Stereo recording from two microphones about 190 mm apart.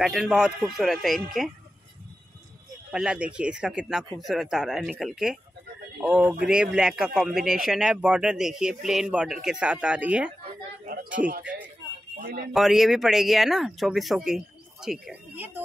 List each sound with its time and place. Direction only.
0.0 s speech: centre (ahead or behind)
2.9 s speech: 5° right (ahead or behind)
10.9 s a sound: 45° right (ahead or behind)
11.4 s a sound: 10° right (ahead or behind)
12.2 s speech: 55° right (ahead or behind)
12.5 s speech: centre (ahead or behind)